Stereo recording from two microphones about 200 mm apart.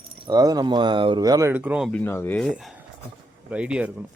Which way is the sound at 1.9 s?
10° left (ahead or behind).